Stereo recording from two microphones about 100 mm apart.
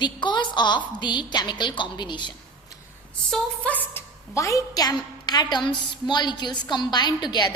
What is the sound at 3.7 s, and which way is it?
Speech, 20° left (ahead or behind).